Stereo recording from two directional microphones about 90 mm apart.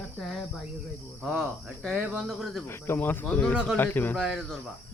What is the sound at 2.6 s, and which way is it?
Speech, 25° left (ahead or behind).